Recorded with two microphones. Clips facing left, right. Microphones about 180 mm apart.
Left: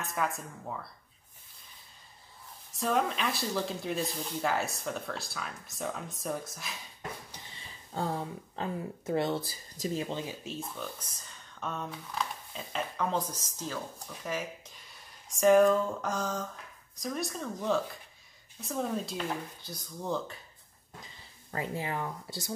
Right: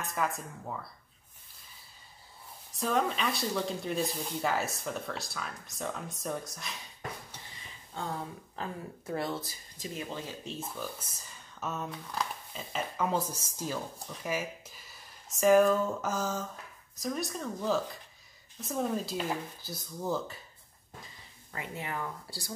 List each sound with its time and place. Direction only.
0.0 s speech: centre (ahead or behind)
2.7 s speech: centre (ahead or behind)
7.9 s speech: 35° left (ahead or behind)
8.5 s speech: 25° left (ahead or behind)
10.4 s speech: centre (ahead or behind)
18.6 s speech: centre (ahead or behind)
21.5 s speech: 30° left (ahead or behind)